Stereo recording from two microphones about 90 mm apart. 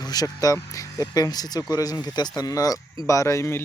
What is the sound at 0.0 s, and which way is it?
Speech, 45° left (ahead or behind).